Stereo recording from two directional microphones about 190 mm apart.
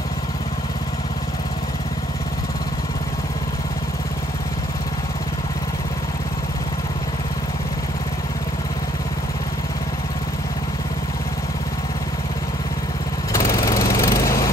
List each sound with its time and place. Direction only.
13.3 s lawn mower: 15° left (ahead or behind)